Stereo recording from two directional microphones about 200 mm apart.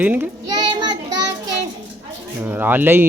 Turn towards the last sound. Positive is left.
turn(degrees=-10)  # may be behind; listen again after turning